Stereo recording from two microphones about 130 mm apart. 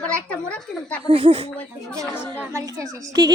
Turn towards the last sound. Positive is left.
turn(degrees=-25)  # may be behind; listen again after turning